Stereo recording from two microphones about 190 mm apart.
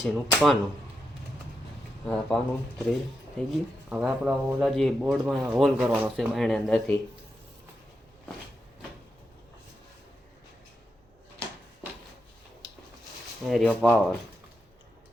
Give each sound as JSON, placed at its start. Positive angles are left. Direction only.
{"t": 0.0, "sound": "speech", "side_deg": 0}
{"t": 2.0, "sound": "speech", "side_deg": 5}
{"t": 13.4, "sound": "speech", "side_deg": 0}